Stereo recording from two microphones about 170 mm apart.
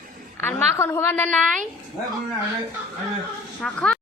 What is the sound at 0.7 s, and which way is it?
Speech, 15° left (ahead or behind).